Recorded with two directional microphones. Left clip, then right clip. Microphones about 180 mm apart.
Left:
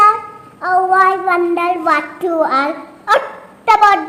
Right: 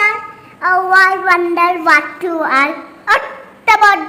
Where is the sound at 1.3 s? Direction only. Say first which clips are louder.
Right 3 dB; 5° right (ahead or behind).